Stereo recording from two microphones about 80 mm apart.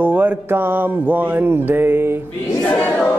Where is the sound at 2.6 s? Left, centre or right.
Centre.